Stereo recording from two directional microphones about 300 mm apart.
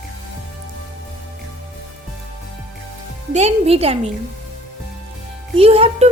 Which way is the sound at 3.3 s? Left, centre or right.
Right.